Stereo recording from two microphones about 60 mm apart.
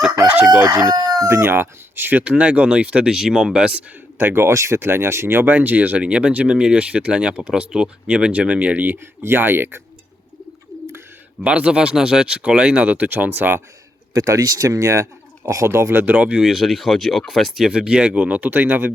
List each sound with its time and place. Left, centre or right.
0.0 s crowing: centre
0.3 s crowing: centre
0.6 s speech: right
1.5 s speech: right
2.2 s speech: right
3.1 s speech: centre
4.2 s speech: right
9.0 s speech: right
11.4 s speech: centre
14.1 s speech: right
16.2 s speech: centre
17.7 s speech: centre